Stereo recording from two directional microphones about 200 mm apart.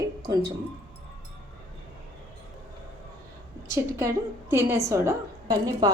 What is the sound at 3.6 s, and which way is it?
A woman's voice, 15° right (ahead or behind).